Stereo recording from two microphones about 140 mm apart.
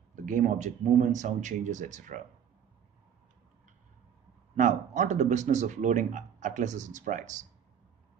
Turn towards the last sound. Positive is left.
turn(degrees=-60)  # may be behind; listen again after turning